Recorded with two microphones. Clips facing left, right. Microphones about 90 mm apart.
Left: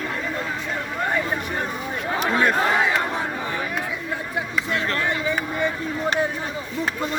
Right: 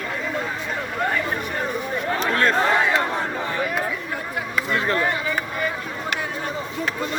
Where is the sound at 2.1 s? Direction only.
10° left (ahead or behind).